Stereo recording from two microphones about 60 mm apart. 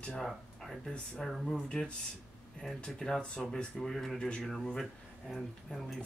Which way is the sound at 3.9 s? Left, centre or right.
Centre.